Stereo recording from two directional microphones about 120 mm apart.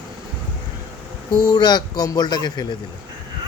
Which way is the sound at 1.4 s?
35° left (ahead or behind).